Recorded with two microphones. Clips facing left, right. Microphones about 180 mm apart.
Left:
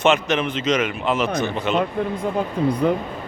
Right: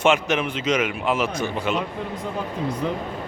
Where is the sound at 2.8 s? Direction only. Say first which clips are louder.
Left 7 dB; 55° left (ahead or behind).